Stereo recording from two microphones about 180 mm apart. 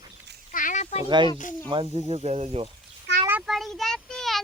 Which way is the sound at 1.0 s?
25° right (ahead or behind).